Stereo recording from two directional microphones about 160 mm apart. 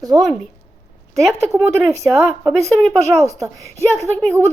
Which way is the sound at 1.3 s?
15° right (ahead or behind).